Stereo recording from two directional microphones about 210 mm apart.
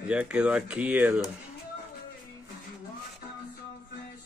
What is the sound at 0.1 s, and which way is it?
Speech, 5° right (ahead or behind).